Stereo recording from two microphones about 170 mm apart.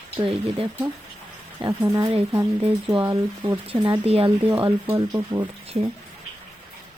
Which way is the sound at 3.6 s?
30° right (ahead or behind).